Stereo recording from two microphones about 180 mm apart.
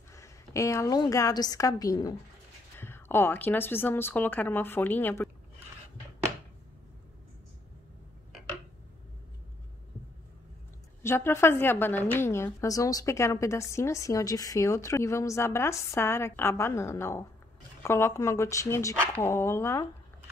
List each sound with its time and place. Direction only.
0.1 s a woman's voice: 15° left (ahead or behind)
11.0 s a woman's voice: 15° left (ahead or behind)